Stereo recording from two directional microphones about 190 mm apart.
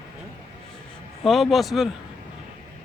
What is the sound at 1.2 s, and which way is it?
Speech, centre (ahead or behind).